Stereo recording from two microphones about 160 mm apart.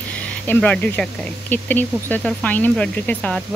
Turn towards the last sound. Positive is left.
turn(degrees=5)  # may be behind; listen again after turning